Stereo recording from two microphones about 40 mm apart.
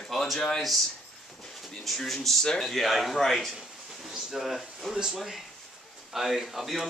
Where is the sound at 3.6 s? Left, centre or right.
Centre.